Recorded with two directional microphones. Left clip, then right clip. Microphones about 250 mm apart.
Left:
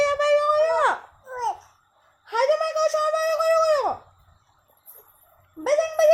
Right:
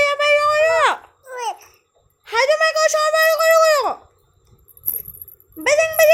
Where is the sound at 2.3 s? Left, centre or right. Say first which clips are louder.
Right 6 dB; centre.